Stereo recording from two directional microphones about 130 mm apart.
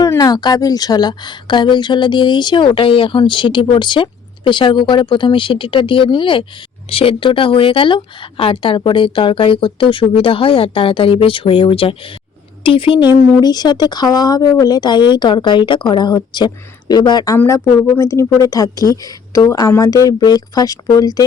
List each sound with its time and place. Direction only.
0.0 s a woman's voice: 30° left (ahead or behind)
17.3 s a woman's voice: 15° left (ahead or behind)